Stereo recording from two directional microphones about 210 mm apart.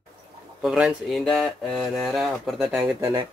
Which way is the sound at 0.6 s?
5° right (ahead or behind).